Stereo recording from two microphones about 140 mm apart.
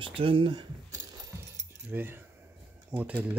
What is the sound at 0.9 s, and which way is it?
Keys jangling, 25° right (ahead or behind).